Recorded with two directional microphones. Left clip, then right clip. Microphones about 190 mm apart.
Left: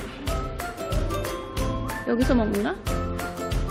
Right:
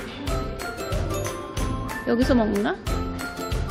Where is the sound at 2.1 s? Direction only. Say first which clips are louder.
Right 2 dB; centre (ahead or behind).